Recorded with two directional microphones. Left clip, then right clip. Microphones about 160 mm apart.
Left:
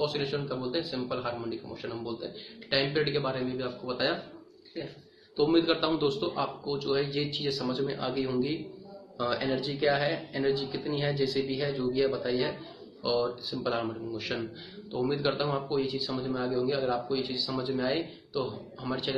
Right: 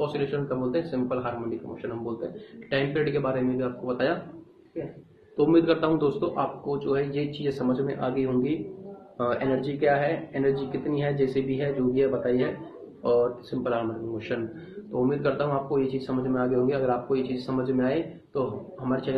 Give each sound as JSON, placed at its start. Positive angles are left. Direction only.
{"t": 0.0, "sound": "speech", "side_deg": 0}
{"t": 5.4, "sound": "speech", "side_deg": 0}
{"t": 15.0, "sound": "speech", "side_deg": 15}
{"t": 15.7, "sound": "speech", "side_deg": 0}